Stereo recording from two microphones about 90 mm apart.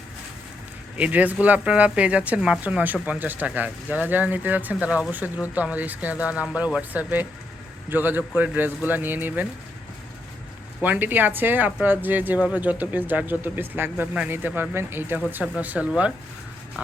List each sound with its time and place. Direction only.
0.9 s speech: 15° right (ahead or behind)
10.8 s speech: 20° right (ahead or behind)
15.5 s speech: 15° right (ahead or behind)